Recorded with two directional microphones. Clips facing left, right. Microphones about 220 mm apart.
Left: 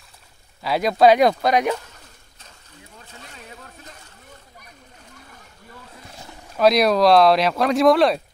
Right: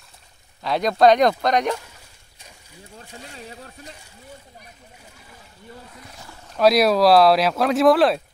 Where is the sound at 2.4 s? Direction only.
10° right (ahead or behind).